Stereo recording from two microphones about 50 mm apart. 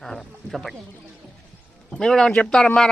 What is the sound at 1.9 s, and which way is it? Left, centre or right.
Speech, centre.